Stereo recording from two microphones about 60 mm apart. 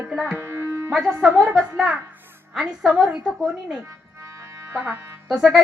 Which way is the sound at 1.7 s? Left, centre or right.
Centre.